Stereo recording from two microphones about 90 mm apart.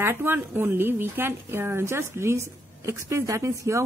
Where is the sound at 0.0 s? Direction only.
25° right (ahead or behind).